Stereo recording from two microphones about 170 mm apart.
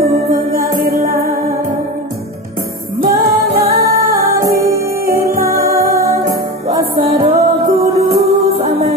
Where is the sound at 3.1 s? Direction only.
20° right (ahead or behind).